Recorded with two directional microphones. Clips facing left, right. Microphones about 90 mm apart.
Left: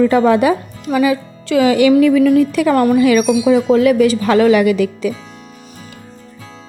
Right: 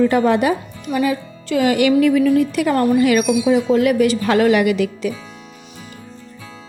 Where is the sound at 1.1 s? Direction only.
90° left.